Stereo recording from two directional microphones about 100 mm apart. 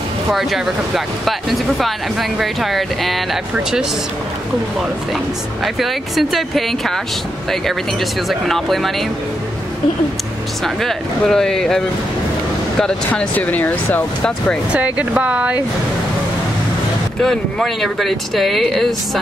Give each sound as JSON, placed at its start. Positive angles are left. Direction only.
{"t": 0.3, "sound": "speech", "side_deg": 0}
{"t": 5.8, "sound": "speech", "side_deg": 0}
{"t": 8.3, "sound": "speech", "side_deg": 0}
{"t": 10.6, "sound": "speech", "side_deg": 5}
{"t": 13.1, "sound": "speech", "side_deg": 15}
{"t": 14.7, "sound": "speech", "side_deg": -15}
{"t": 17.2, "sound": "speech", "side_deg": 5}